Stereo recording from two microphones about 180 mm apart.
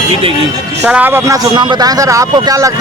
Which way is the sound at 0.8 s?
10° right (ahead or behind).